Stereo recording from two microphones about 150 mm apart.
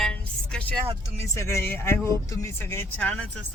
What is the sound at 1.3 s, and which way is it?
Speech, 20° left (ahead or behind).